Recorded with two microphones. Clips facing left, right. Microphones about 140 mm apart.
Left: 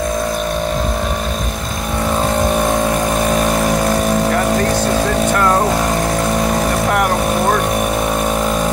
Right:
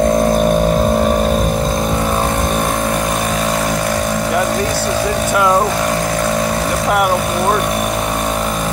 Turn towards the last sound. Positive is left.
turn(degrees=-5)  # may be behind; listen again after turning